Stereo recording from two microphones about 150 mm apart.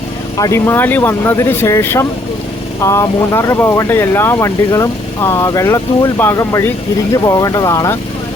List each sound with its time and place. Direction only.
0.3 s speech: 20° left (ahead or behind)